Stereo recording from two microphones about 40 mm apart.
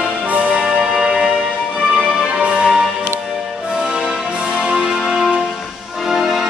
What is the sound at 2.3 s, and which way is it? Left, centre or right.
Music, right.